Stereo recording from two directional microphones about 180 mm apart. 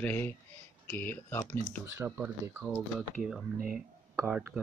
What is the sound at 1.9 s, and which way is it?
Speech, 15° right (ahead or behind).